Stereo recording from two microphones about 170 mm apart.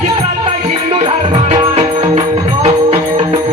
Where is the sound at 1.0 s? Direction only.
30° right (ahead or behind).